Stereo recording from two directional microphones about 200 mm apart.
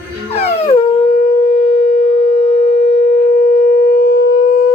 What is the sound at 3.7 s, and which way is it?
Civil defense siren, 50° left (ahead or behind).